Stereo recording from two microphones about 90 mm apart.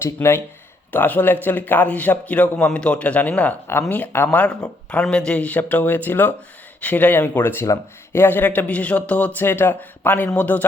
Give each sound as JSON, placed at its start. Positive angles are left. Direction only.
{"t": 0.0, "sound": "a man's voice", "side_deg": 30}